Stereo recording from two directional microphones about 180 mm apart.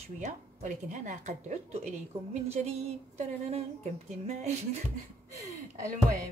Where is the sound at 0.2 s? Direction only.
40° right (ahead or behind).